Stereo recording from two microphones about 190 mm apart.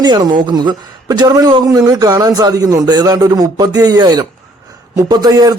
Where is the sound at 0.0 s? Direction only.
20° right (ahead or behind).